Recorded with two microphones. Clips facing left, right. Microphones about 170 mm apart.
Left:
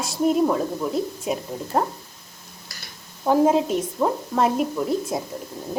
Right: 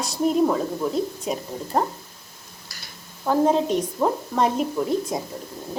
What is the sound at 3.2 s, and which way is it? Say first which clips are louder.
Speech: left 1 dB; 5° left (ahead or behind).